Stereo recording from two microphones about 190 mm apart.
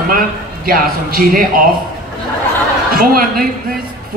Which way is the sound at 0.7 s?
50° right (ahead or behind).